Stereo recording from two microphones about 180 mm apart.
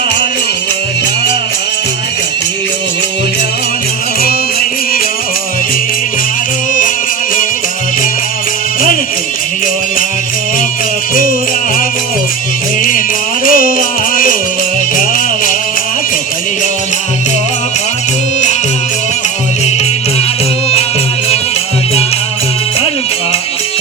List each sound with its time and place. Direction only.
11.1 s music: 50° left (ahead or behind)
13.5 s music: 50° left (ahead or behind)